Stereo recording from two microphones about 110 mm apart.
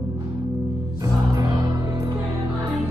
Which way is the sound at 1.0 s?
30° right (ahead or behind).